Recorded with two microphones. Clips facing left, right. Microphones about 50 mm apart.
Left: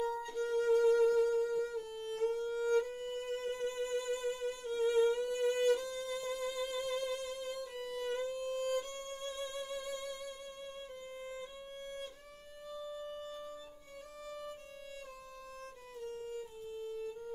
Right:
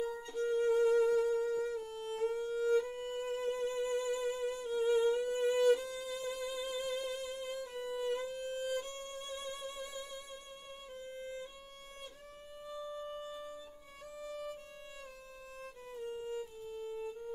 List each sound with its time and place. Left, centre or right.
0.0 s music: centre
12.6 s music: centre
16.7 s violin: centre